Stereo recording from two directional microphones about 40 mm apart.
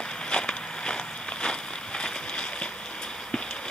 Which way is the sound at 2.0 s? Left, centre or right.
Left.